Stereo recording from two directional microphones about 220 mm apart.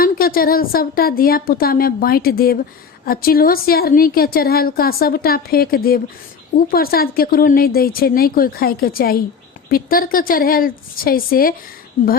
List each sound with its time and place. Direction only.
0.0 s a woman's voice: 40° left (ahead or behind)